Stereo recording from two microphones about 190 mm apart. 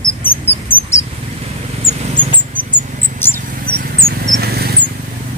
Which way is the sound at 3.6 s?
50° right (ahead or behind).